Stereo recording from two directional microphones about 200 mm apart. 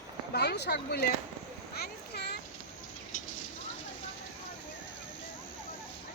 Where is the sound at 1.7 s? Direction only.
50° left (ahead or behind).